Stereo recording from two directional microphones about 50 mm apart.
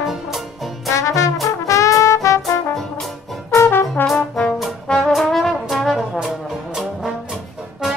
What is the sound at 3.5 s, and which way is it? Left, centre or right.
Brass instrument, left.